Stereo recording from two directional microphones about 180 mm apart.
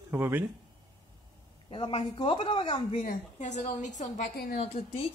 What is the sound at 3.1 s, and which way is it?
A woman's voice, 40° left (ahead or behind).